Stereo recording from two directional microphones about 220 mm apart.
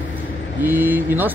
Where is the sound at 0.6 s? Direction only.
10° right (ahead or behind).